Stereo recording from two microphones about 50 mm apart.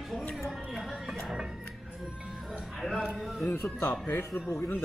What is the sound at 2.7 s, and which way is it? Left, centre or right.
Speech, centre.